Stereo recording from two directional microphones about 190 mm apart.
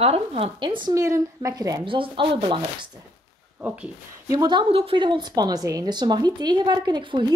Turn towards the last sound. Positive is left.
turn(degrees=-25)  # may be behind; listen again after turning